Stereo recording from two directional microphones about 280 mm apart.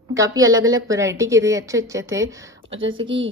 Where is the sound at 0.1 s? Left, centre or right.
Centre.